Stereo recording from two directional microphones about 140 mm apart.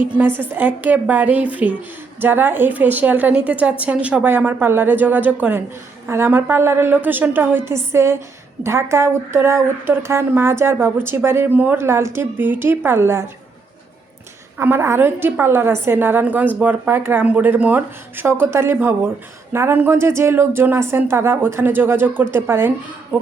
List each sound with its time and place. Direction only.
0.2 s speech: 15° right (ahead or behind)
14.6 s speech: 15° right (ahead or behind)